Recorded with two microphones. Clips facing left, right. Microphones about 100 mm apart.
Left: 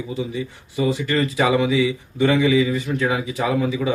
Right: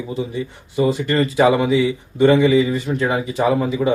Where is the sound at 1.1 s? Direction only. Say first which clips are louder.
Right 4 dB; 35° right (ahead or behind).